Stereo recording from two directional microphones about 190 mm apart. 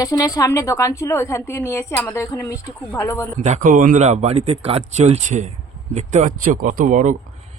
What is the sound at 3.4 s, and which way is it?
Speech, 40° right (ahead or behind).